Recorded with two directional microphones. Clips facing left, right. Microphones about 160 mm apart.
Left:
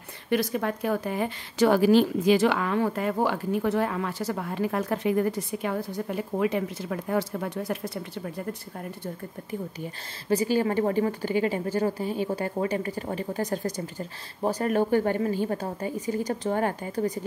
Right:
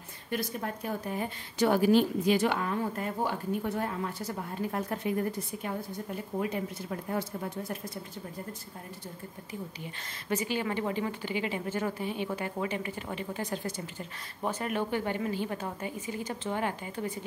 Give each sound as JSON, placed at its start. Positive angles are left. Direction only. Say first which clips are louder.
{"t": 0.3, "sound": "speech", "louder": "left 8 dB", "side_deg": 85}
{"t": 9.0, "sound": "speech", "louder": "left 7 dB", "side_deg": 55}
{"t": 10.3, "sound": "a woman's voice", "louder": "left 8 dB", "side_deg": 35}